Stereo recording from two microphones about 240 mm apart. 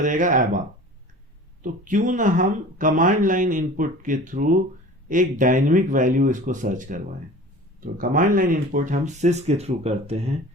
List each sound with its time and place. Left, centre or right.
0.0 s speech: right
1.6 s speech: right